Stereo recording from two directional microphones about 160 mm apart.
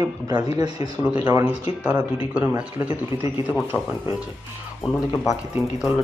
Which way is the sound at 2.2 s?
10° right (ahead or behind).